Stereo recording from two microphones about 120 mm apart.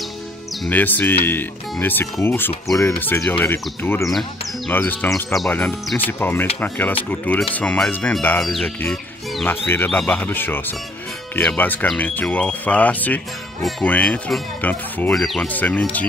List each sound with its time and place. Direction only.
0.7 s speech: 15° left (ahead or behind)
4.1 s speech: centre (ahead or behind)
4.7 s speech: 15° left (ahead or behind)
5.3 s speech: 25° left (ahead or behind)
5.9 s speech: 15° left (ahead or behind)
9.7 s speech: 15° left (ahead or behind)
13.6 s speech: centre (ahead or behind)
13.8 s speech: 10° left (ahead or behind)
15.1 s speech: centre (ahead or behind)
15.4 s speech: 15° left (ahead or behind)